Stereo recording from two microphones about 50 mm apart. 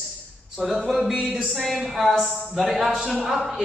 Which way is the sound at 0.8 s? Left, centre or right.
Centre.